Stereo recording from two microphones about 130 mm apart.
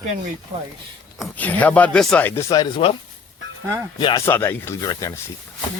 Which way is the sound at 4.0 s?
35° left (ahead or behind).